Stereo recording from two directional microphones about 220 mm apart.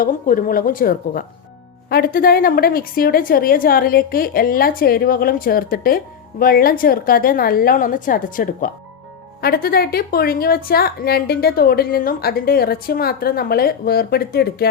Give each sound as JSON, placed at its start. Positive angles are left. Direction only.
{"t": 0.0, "sound": "a woman's voice", "side_deg": 40}